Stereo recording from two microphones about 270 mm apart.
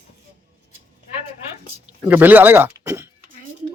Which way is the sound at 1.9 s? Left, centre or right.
Centre.